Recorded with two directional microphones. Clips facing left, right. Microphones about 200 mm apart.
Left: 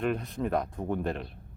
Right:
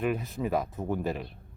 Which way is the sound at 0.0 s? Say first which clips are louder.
Even; 5° right (ahead or behind).